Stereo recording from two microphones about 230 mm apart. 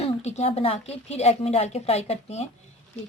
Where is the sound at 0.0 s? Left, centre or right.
Left.